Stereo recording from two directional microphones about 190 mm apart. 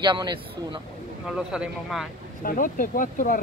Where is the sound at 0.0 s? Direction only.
25° right (ahead or behind).